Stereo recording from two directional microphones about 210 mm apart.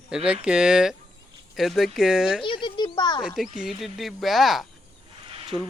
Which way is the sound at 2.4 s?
20° left (ahead or behind).